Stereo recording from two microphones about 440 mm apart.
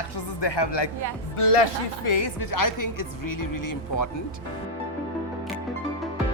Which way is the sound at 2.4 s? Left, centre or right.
Left.